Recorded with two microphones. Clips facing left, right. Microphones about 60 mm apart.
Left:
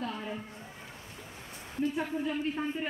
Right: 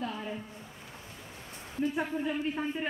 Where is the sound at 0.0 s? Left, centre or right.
Centre.